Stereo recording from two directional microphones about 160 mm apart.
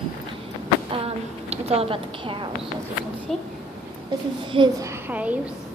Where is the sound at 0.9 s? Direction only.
40° right (ahead or behind).